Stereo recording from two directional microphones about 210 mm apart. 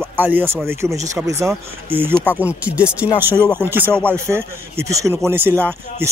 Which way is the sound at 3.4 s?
5° left (ahead or behind).